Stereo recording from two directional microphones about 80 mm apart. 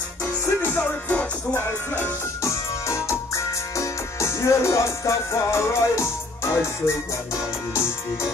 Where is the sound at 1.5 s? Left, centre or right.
Left.